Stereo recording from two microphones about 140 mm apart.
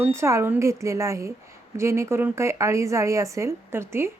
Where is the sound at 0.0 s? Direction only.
20° right (ahead or behind).